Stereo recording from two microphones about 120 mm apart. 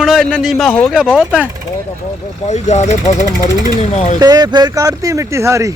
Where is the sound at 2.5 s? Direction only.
75° left (ahead or behind).